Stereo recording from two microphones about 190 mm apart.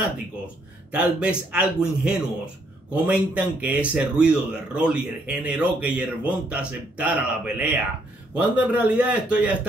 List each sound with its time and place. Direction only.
0.9 s a man's voice: 5° right (ahead or behind)